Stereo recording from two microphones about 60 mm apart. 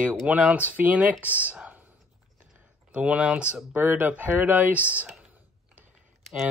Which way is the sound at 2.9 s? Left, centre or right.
Centre.